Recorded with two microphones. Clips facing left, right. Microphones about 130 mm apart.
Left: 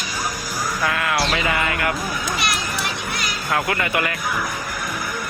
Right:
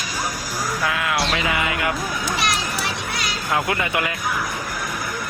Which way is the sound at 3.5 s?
15° right (ahead or behind).